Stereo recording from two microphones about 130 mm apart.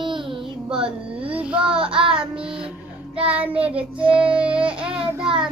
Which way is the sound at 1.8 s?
40° right (ahead or behind).